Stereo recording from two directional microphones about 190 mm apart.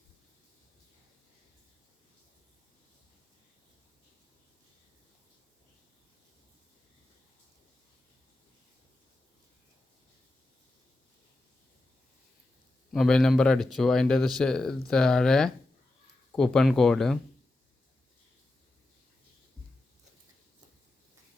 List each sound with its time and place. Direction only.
12.9 s speech: centre (ahead or behind)